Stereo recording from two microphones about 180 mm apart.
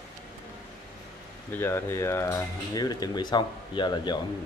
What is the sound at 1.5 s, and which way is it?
Speech, 15° left (ahead or behind).